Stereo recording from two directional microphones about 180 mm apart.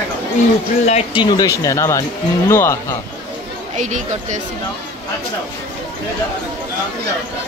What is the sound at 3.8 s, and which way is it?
Speech, 45° right (ahead or behind).